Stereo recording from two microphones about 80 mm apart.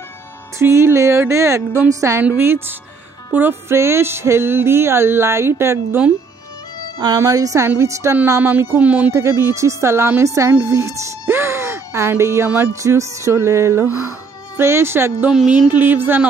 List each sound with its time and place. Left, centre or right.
0.6 s music: right
2.3 s speech: right
3.3 s music: right
7.2 s music: right
8.4 s speech: right
9.1 s music: right
10.6 s speech: right
12.8 s music: right
15.3 s a sound: centre
15.7 s speech: right